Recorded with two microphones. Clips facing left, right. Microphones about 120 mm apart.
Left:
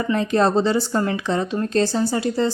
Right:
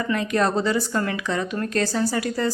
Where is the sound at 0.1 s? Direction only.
30° left (ahead or behind).